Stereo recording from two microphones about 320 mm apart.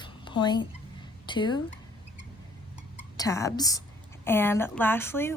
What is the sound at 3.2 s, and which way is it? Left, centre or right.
A woman's voice, centre.